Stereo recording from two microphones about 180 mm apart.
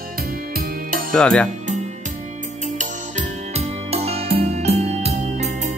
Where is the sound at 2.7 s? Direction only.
40° right (ahead or behind).